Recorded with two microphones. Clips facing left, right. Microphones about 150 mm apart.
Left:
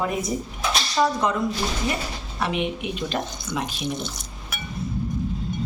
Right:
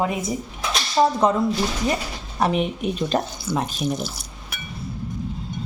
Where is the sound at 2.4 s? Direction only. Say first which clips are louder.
Right 4 dB; 40° right (ahead or behind).